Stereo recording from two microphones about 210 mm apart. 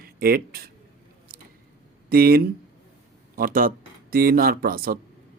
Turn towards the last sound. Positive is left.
turn(degrees=-45)  # may be behind; listen again after turning